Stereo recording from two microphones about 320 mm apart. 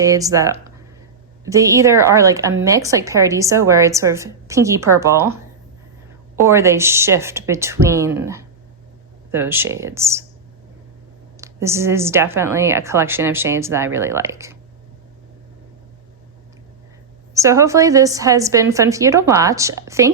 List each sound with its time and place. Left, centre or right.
0.0 s a woman's voice: centre
6.4 s a woman's voice: centre
11.3 s a woman's voice: centre
17.3 s a woman's voice: centre